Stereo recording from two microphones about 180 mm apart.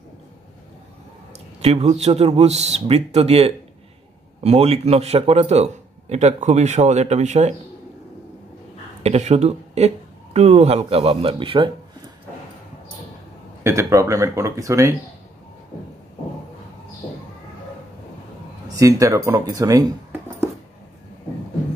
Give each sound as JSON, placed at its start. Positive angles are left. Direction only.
{"t": 1.6, "sound": "a man's voice", "side_deg": -35}
{"t": 9.0, "sound": "a man's voice", "side_deg": -35}
{"t": 13.7, "sound": "speech", "side_deg": -15}
{"t": 18.8, "sound": "speech", "side_deg": -20}